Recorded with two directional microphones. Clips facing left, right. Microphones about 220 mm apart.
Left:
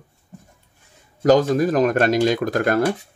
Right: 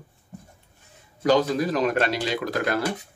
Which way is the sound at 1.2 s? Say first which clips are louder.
Left 5 dB; 45° left (ahead or behind).